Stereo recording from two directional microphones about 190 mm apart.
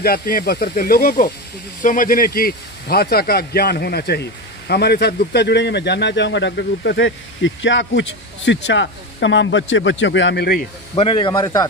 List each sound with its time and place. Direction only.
0.0 s speech: 50° left (ahead or behind)
11.0 s a man's voice: 25° left (ahead or behind)